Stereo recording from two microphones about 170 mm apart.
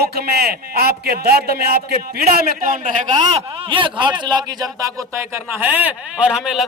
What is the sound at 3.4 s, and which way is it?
A man's voice, 30° right (ahead or behind).